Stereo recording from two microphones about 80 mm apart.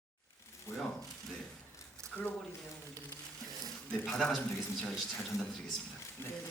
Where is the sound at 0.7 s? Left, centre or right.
Left.